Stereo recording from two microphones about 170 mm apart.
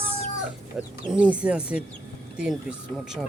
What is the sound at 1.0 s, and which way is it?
Speech, 5° right (ahead or behind).